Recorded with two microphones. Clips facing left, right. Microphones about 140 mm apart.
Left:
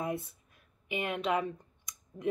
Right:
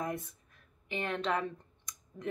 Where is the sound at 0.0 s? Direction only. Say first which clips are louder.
Left 2 dB; 10° left (ahead or behind).